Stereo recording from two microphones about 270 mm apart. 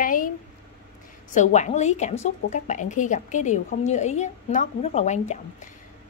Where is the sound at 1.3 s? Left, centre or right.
Left.